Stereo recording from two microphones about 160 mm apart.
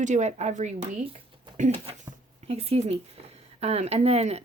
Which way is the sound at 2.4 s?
40° right (ahead or behind).